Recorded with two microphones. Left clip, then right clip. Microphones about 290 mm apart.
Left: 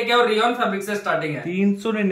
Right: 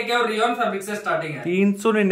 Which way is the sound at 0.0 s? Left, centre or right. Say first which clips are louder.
Left 3 dB; centre.